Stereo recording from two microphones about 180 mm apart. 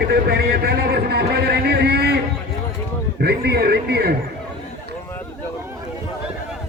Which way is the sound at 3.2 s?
65° right (ahead or behind).